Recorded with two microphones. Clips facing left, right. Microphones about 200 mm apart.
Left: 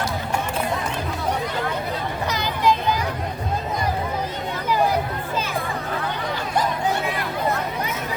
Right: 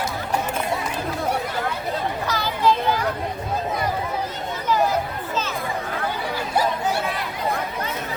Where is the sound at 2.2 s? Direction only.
20° left (ahead or behind).